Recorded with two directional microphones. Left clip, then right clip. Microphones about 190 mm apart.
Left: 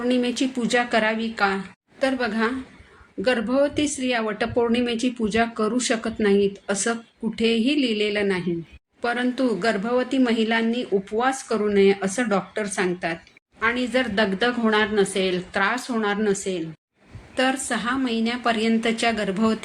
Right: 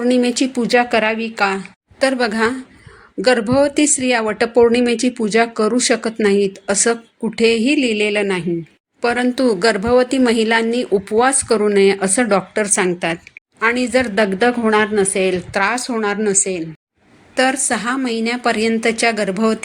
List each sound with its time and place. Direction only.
0.0 s speech: 40° right (ahead or behind)